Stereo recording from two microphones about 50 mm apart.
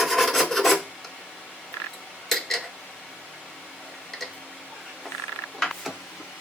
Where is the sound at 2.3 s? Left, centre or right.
Centre.